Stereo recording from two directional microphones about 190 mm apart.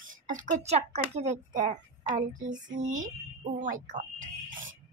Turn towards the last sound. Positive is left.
turn(degrees=-40)  # may be behind; listen again after turning